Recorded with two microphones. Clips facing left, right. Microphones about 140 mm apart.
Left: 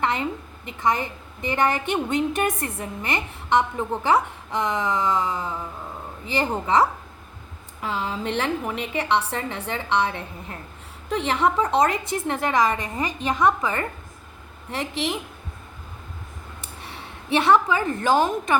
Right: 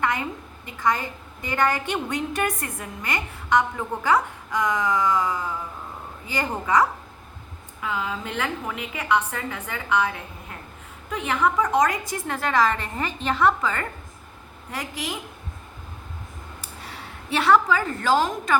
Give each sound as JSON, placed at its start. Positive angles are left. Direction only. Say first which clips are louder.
{"t": 0.0, "sound": "a woman's voice", "louder": "left 1 dB", "side_deg": 25}
{"t": 7.8, "sound": "a woman's voice", "louder": "left 1 dB", "side_deg": 30}
{"t": 16.6, "sound": "a woman's voice", "louder": "left 1 dB", "side_deg": 25}